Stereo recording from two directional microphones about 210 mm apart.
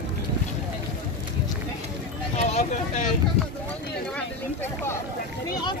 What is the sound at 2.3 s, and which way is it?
Vehicle, 35° left (ahead or behind).